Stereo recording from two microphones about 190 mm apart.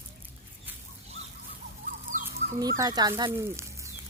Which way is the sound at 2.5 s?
20° right (ahead or behind).